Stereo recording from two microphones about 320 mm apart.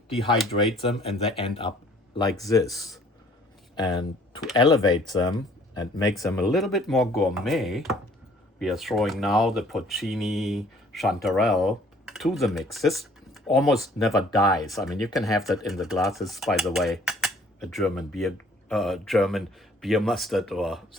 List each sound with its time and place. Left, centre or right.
0.8 s speech: centre